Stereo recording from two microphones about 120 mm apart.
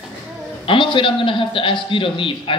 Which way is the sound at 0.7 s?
45° left (ahead or behind).